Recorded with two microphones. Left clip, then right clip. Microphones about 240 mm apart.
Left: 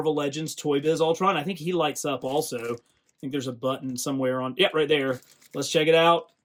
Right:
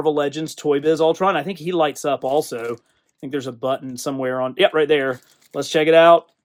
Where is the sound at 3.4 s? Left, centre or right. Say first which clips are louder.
Right 6 dB; right.